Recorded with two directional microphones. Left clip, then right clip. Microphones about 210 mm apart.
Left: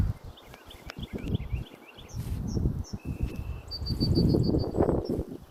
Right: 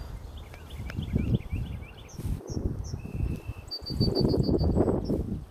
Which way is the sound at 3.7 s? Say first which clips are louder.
Right 2 dB; 50° right (ahead or behind).